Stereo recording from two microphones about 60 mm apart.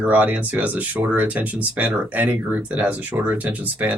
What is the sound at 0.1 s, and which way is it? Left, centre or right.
Speech, right.